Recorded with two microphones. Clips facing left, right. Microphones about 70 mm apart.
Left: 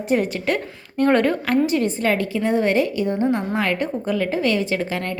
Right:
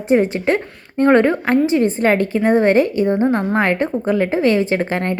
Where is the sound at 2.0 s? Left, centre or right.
Right.